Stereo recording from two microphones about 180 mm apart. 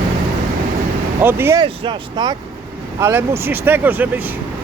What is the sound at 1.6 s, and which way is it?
Speech, 25° right (ahead or behind).